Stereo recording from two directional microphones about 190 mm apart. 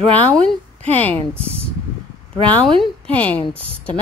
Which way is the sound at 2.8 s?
5° left (ahead or behind).